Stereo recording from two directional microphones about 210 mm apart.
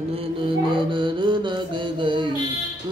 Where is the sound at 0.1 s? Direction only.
25° right (ahead or behind).